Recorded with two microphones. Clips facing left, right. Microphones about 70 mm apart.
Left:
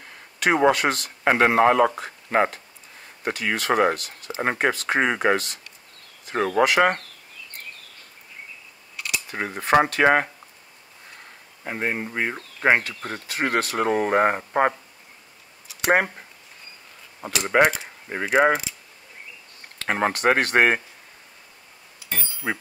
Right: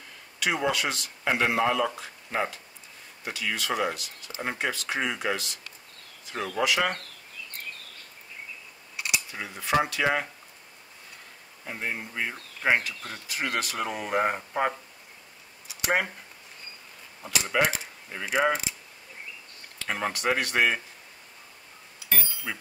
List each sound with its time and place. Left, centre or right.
0.4 s speech: left
9.3 s speech: left
11.6 s speech: left
15.7 s a sound: left
17.2 s speech: left
19.8 s speech: left
22.5 s speech: left